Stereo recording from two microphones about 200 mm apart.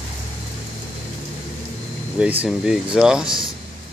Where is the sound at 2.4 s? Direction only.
5° right (ahead or behind).